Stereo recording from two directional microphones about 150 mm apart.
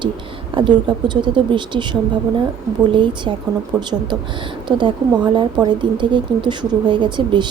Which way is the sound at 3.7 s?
20° right (ahead or behind).